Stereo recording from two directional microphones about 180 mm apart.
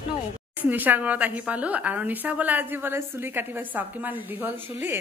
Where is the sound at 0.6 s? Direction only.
10° right (ahead or behind).